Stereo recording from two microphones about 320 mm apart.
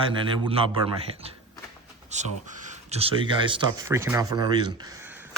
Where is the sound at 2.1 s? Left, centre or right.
Right.